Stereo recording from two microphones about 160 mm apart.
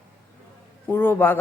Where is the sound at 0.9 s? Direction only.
15° left (ahead or behind).